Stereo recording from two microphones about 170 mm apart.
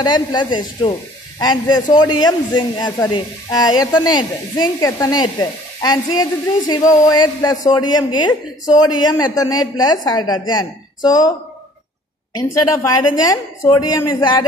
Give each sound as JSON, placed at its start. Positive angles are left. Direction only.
{"t": 0.0, "sound": "a man's voice", "side_deg": 25}
{"t": 12.4, "sound": "a man's voice", "side_deg": 20}